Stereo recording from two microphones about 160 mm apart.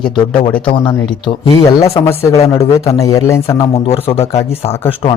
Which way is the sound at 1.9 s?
20° left (ahead or behind).